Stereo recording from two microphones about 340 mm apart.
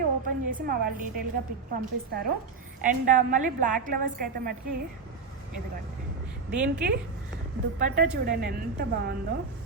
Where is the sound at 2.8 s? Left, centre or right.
Right.